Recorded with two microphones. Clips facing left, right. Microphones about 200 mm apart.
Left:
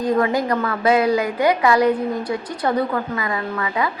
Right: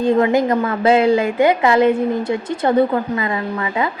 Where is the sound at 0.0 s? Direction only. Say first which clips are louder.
Right 4 dB; 25° right (ahead or behind).